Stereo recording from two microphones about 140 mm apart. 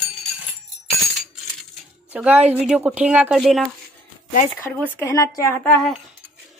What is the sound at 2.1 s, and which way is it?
Speech, 10° right (ahead or behind).